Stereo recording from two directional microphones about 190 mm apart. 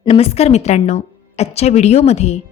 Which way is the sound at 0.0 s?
30° left (ahead or behind).